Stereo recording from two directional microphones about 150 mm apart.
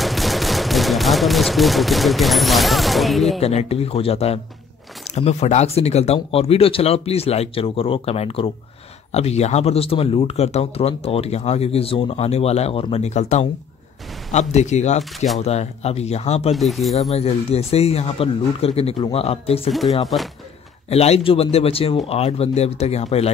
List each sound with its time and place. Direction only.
0.0 s gunshot: centre (ahead or behind)
3.3 s speech: 45° left (ahead or behind)
15.1 s speech: centre (ahead or behind)
15.4 s speech: 45° left (ahead or behind)
16.5 s speech: centre (ahead or behind)
17.1 s speech: 45° left (ahead or behind)
20.9 s speech: 45° left (ahead or behind)